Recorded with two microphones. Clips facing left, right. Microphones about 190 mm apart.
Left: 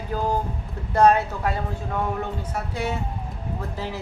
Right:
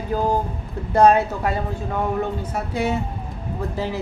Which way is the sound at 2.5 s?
15° right (ahead or behind).